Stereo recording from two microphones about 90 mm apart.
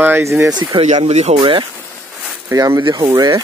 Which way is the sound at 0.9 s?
60° right (ahead or behind).